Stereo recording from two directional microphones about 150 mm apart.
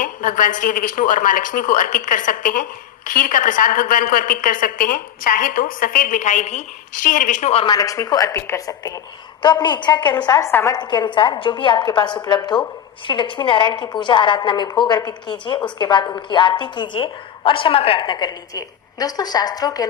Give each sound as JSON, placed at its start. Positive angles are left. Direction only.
{"t": 0.0, "sound": "a woman's voice", "side_deg": 60}
{"t": 7.5, "sound": "a woman's voice", "side_deg": 35}
{"t": 7.8, "sound": "a woman's voice", "side_deg": 25}
{"t": 10.8, "sound": "a woman's voice", "side_deg": 30}